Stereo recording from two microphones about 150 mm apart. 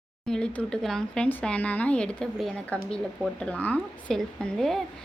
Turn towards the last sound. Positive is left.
turn(degrees=0)  # may be behind; listen again after turning